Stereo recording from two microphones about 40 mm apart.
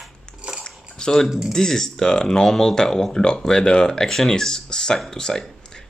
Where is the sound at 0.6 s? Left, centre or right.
Centre.